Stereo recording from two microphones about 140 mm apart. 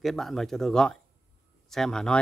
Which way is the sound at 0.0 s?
Centre (ahead or behind).